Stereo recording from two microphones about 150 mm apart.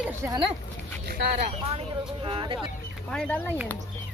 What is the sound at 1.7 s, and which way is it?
Speech, 35° right (ahead or behind).